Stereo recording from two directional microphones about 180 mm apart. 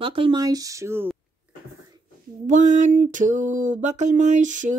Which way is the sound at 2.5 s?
45° right (ahead or behind).